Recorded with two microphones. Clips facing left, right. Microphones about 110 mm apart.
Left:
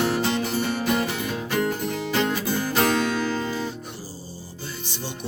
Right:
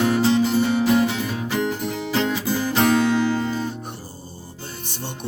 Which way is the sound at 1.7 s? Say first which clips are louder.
Right 1 dB; 15° right (ahead or behind).